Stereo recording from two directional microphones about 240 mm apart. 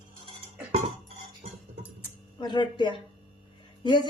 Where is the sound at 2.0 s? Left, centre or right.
Centre.